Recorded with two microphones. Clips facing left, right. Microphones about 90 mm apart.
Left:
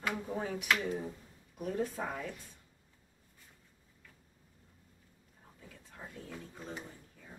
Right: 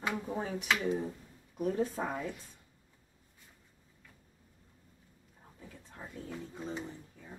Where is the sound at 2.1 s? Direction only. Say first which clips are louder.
Right 3 dB; 20° right (ahead or behind).